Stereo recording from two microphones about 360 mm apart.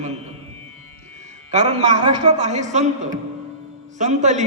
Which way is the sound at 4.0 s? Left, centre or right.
Centre.